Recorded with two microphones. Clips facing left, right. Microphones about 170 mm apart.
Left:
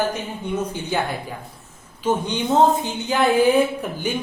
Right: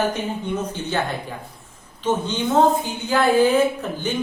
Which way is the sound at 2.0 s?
15° left (ahead or behind).